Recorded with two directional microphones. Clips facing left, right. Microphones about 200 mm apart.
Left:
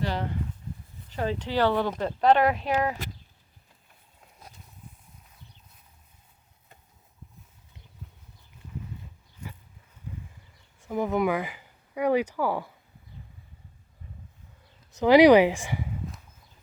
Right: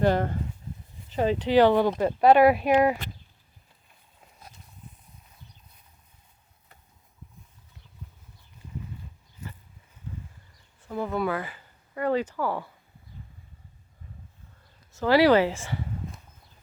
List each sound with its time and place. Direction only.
0.0 s speech: 50° right (ahead or behind)
1.1 s speech: 20° right (ahead or behind)
10.8 s speech: 15° left (ahead or behind)
14.9 s speech: 15° left (ahead or behind)